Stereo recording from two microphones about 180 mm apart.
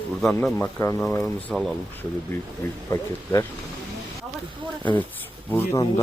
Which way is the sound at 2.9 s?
15° left (ahead or behind).